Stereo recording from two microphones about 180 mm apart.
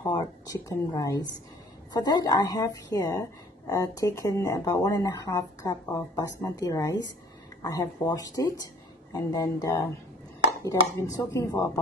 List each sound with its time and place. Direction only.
0.0 s a woman's voice: 20° left (ahead or behind)